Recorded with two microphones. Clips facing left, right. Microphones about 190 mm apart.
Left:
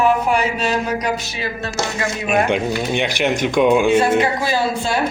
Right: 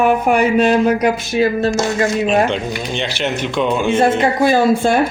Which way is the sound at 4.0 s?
50° right (ahead or behind).